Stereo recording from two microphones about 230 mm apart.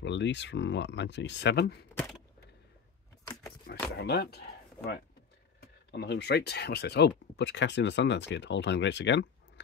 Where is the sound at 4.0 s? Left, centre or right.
Left.